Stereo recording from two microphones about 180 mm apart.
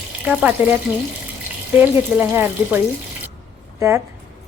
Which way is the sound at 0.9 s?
10° right (ahead or behind).